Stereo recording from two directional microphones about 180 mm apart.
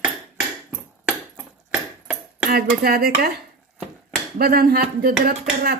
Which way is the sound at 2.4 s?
55° right (ahead or behind).